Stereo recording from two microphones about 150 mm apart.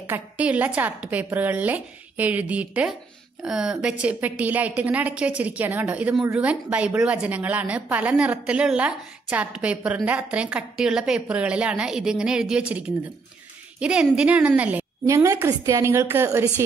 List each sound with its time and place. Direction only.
0.0 s a woman's voice: 10° right (ahead or behind)